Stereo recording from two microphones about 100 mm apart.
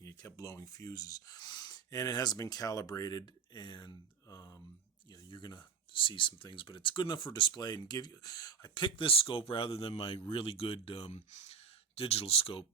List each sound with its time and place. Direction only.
0.0 s speech: 35° left (ahead or behind)
4.3 s speech: 35° left (ahead or behind)
5.3 s speech: 50° left (ahead or behind); by 12.6 s 70° left (ahead or behind)